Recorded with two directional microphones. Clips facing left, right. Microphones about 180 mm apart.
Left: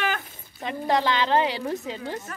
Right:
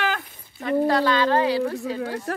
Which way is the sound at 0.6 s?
20° left (ahead or behind).